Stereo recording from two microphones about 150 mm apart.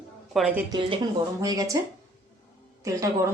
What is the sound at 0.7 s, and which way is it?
Speech, 35° right (ahead or behind).